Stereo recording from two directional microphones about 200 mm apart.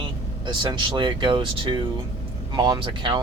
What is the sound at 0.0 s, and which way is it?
Speech, 25° right (ahead or behind).